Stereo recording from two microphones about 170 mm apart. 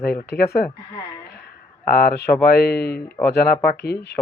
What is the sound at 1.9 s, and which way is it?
Speech, 60° left (ahead or behind).